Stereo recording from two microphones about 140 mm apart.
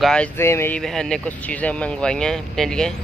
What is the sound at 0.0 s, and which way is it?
Speech, 5° left (ahead or behind).